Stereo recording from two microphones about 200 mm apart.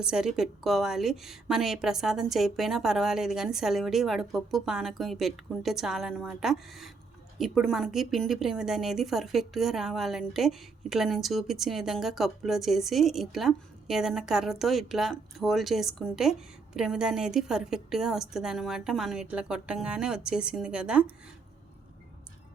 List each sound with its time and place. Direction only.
0.0 s a woman's voice: 5° right (ahead or behind)